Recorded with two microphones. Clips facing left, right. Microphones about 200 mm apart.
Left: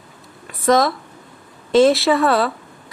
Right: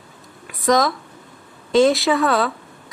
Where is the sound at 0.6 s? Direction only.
Centre (ahead or behind).